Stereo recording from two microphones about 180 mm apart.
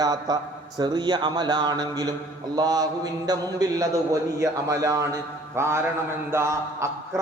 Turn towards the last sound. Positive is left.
turn(degrees=-15)  # may be behind; listen again after turning